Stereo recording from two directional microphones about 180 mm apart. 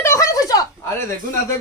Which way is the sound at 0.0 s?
15° left (ahead or behind).